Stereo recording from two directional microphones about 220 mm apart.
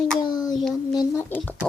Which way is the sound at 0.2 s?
20° left (ahead or behind).